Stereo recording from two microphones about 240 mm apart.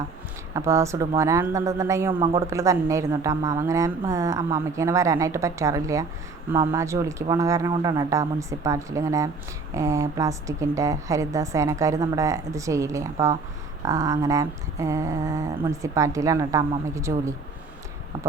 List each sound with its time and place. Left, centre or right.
0.5 s speech: centre